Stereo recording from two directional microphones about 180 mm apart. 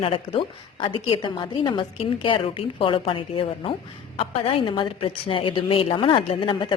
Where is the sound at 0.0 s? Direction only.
30° left (ahead or behind).